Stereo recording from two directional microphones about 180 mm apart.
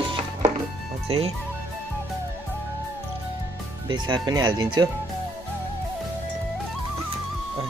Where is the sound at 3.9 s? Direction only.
25° right (ahead or behind).